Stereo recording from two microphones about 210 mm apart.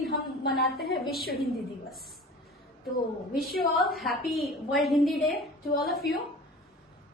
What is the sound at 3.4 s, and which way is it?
A woman's voice, centre (ahead or behind).